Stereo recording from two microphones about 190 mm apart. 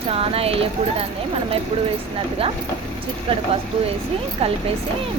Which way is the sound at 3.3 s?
30° right (ahead or behind).